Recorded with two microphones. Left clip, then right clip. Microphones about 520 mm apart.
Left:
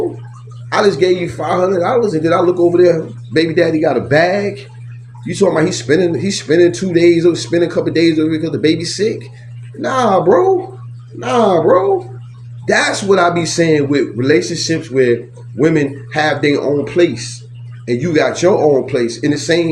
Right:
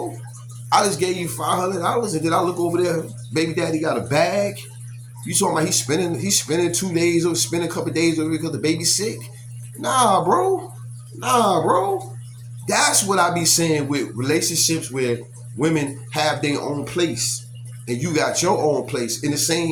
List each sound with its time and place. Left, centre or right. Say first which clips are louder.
0.7 s speech: left 6 dB; right